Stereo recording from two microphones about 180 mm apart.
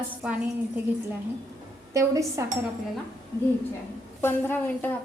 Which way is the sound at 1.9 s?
15° right (ahead or behind).